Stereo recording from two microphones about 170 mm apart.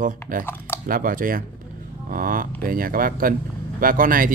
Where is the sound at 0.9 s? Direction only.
55° right (ahead or behind).